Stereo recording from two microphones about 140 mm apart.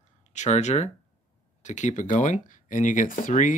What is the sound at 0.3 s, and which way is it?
Speech, 55° left (ahead or behind).